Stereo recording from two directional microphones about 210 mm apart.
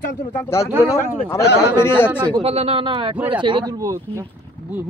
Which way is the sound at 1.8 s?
10° left (ahead or behind).